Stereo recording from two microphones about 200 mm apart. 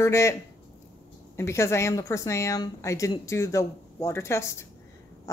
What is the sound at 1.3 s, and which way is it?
Speech, 15° left (ahead or behind).